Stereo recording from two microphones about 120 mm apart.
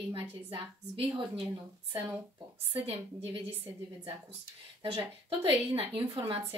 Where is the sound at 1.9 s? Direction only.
15° right (ahead or behind).